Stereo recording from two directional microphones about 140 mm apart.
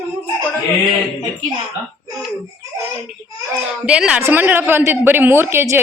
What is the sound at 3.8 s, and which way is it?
A woman's voice, 5° right (ahead or behind).